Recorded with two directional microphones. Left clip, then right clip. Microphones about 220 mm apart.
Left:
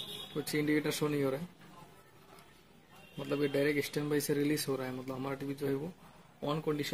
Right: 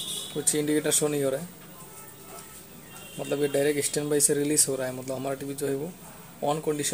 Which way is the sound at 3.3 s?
20° left (ahead or behind).